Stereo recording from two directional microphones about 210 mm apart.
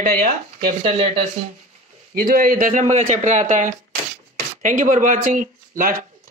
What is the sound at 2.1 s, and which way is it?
A man's voice, 45° right (ahead or behind).